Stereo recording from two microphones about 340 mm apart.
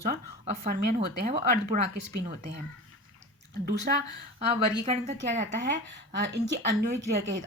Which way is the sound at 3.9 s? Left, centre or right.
Right.